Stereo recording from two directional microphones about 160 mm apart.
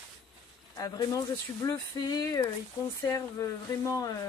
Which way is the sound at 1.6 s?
25° left (ahead or behind).